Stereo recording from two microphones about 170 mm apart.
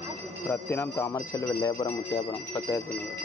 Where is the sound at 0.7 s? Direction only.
15° left (ahead or behind).